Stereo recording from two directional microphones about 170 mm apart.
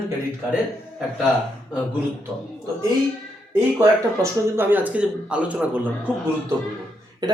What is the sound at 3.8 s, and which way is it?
A man's voice, 15° right (ahead or behind).